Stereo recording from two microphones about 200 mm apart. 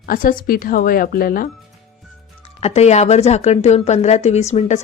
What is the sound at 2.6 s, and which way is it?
A woman's voice, 30° left (ahead or behind).